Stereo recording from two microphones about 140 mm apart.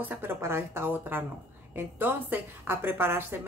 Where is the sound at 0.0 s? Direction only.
15° right (ahead or behind).